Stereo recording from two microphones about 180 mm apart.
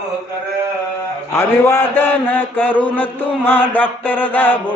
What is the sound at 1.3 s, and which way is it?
A man's voice, 15° left (ahead or behind).